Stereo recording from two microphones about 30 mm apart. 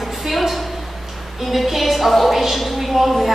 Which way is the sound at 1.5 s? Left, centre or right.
Centre.